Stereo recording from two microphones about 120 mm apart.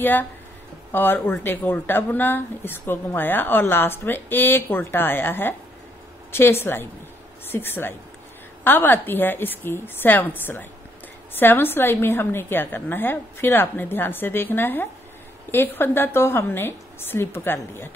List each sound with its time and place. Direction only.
0.0 s a woman's voice: 15° left (ahead or behind)